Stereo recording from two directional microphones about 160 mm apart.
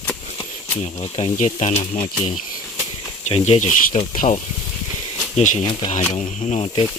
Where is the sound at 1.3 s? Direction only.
50° left (ahead or behind).